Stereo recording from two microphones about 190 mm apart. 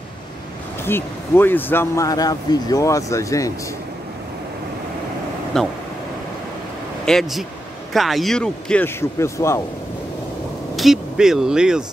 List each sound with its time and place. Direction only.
0.8 s speech: 10° left (ahead or behind)
5.5 s a man's voice: centre (ahead or behind)
7.1 s a man's voice: centre (ahead or behind)
10.8 s a man's voice: centre (ahead or behind)